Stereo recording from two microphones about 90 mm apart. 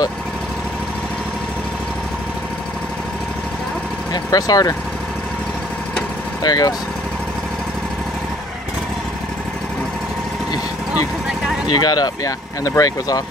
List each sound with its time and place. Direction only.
4.1 s speech: 45° left (ahead or behind)
6.4 s speech: 45° left (ahead or behind)
11.8 s speech: 50° left (ahead or behind)